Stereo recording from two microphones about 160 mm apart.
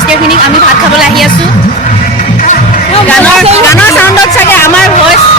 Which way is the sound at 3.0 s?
5° left (ahead or behind).